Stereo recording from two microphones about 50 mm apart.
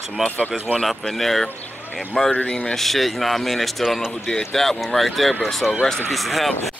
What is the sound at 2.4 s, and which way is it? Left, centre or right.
Speech, centre.